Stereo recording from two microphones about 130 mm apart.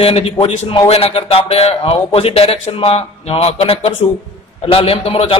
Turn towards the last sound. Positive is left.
turn(degrees=50)  # may be behind; listen again after turning